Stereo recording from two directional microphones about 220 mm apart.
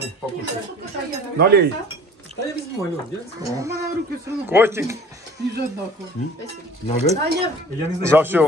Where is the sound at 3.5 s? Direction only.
15° right (ahead or behind).